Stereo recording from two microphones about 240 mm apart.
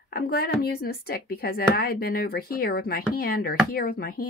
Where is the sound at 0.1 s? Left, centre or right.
Left.